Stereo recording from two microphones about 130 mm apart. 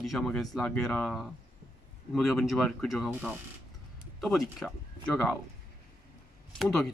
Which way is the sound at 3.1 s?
10° right (ahead or behind).